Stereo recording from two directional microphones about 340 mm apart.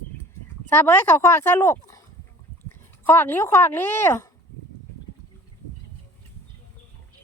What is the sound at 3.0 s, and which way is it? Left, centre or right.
Speech, centre.